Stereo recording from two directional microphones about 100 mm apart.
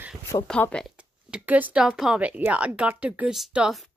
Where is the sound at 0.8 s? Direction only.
10° right (ahead or behind).